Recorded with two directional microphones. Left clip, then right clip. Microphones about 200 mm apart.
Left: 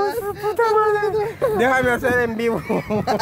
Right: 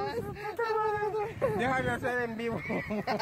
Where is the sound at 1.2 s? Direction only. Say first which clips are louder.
Left 10 dB; 15° left (ahead or behind).